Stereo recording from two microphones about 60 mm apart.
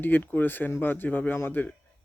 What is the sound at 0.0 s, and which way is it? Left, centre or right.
A man's voice, left.